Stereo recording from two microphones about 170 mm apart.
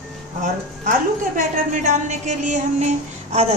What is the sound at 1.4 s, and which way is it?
Speech, 45° right (ahead or behind).